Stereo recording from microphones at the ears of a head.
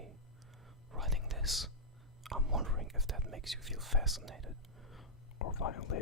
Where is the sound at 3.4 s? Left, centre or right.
Centre.